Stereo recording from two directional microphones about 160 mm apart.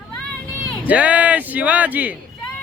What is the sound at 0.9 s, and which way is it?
Speech, 10° right (ahead or behind).